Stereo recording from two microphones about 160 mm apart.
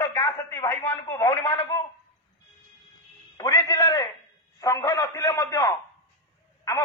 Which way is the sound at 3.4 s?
20° left (ahead or behind).